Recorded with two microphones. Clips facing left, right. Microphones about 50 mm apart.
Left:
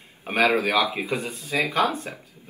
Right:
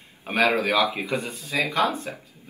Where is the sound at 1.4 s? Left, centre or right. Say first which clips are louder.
Left 1 dB; left.